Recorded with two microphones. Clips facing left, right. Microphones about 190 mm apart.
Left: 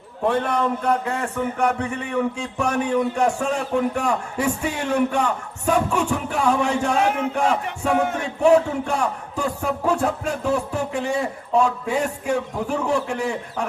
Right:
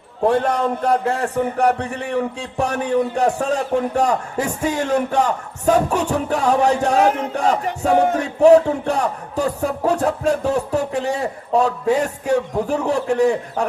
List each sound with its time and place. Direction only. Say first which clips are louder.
0.3 s music: right 3 dB; 40° right (ahead or behind)